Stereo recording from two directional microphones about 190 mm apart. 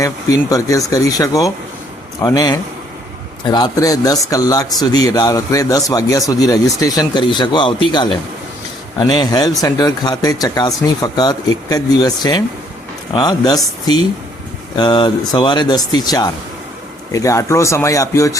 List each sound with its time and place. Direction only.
0.9 s speech: 20° left (ahead or behind)
14.8 s speech: 25° left (ahead or behind)